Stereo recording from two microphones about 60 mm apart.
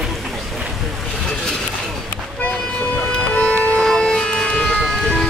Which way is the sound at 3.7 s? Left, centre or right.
Centre.